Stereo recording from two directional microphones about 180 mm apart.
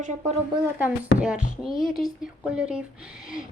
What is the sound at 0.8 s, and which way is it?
Speech, 5° right (ahead or behind).